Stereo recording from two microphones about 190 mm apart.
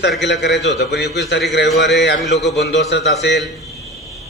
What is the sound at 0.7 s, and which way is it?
Speech, 65° left (ahead or behind).